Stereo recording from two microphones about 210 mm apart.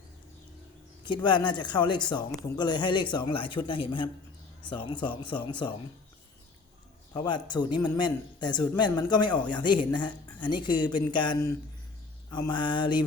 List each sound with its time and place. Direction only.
1.0 s speech: 20° left (ahead or behind)
7.1 s speech: 20° left (ahead or behind)